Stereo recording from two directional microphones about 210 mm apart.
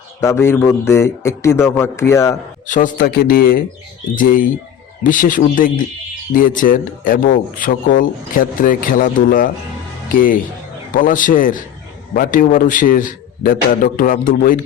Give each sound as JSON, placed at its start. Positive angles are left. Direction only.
{"t": 0.2, "sound": "a man's voice", "side_deg": 10}
{"t": 2.6, "sound": "speech", "side_deg": 40}
{"t": 5.0, "sound": "speech", "side_deg": 40}